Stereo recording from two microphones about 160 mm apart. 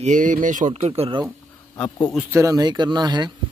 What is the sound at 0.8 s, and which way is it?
Speech, 35° right (ahead or behind).